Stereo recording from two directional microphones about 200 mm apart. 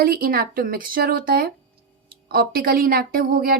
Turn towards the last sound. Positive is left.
turn(degrees=-45)  # may be behind; listen again after turning